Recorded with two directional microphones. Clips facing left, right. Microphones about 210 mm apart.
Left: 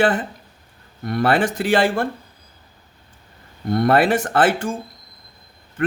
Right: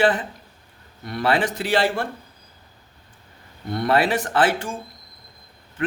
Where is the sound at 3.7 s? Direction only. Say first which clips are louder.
Left 4 dB; 50° left (ahead or behind).